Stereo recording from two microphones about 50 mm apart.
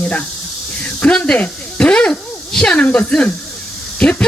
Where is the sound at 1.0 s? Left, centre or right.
Left.